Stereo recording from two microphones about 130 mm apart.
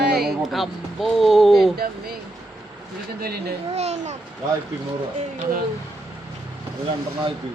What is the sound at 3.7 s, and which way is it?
Speech, 60° right (ahead or behind).